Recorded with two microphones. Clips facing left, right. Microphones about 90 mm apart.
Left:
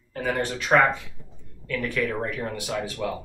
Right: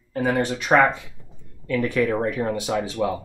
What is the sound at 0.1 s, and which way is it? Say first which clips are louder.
Speech: right 5 dB; 20° right (ahead or behind).